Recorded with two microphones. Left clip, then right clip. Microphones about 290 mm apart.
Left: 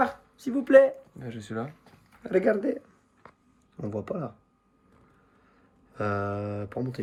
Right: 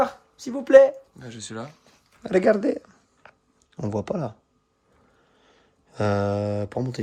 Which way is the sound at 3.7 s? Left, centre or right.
Right.